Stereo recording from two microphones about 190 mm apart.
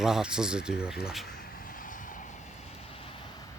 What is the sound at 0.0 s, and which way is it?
Speech, 5° right (ahead or behind).